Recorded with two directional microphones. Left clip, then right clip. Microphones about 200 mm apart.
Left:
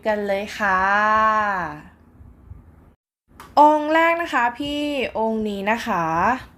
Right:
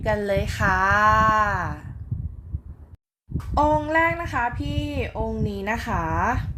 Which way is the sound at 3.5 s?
15° left (ahead or behind).